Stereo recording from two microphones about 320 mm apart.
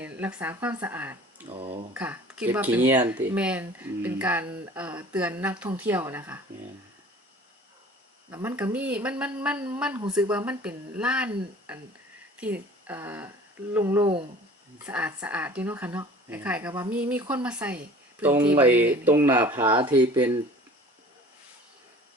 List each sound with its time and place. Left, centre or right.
0.0 s speech: centre
1.5 s speech: centre
1.9 s speech: centre
8.3 s a woman's voice: centre
14.8 s speech: centre